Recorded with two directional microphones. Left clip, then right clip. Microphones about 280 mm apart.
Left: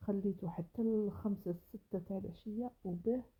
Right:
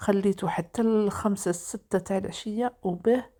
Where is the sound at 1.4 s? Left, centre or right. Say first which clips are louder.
Right 14 dB; centre.